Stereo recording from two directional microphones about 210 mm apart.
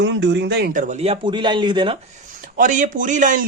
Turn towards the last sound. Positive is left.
turn(degrees=-40)  # may be behind; listen again after turning